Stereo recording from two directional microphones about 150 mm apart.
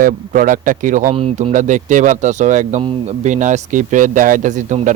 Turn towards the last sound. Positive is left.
turn(degrees=-55)  # may be behind; listen again after turning